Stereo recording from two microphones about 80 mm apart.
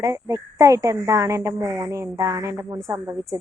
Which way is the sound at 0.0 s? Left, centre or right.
Right.